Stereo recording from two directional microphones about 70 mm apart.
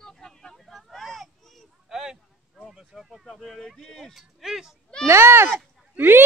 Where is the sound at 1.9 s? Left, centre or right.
Centre.